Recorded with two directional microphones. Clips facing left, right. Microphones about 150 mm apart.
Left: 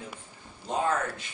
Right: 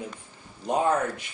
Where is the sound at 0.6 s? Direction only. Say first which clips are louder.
Right 4 dB; 15° right (ahead or behind).